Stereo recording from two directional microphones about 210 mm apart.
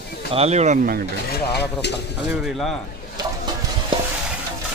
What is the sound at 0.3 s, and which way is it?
Speech, 30° right (ahead or behind).